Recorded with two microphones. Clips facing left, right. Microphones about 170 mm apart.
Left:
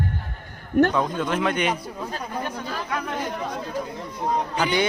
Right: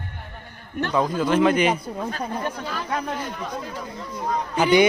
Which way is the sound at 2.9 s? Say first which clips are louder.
Right 4 dB; 30° right (ahead or behind).